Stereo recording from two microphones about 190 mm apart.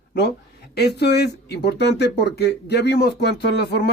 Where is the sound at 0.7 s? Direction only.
60° left (ahead or behind).